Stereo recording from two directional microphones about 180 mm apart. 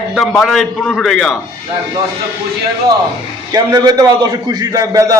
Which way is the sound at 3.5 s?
20° right (ahead or behind).